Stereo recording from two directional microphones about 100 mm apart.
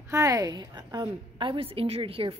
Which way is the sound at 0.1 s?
35° right (ahead or behind).